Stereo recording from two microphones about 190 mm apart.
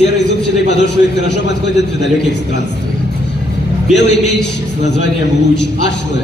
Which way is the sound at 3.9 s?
65° left (ahead or behind).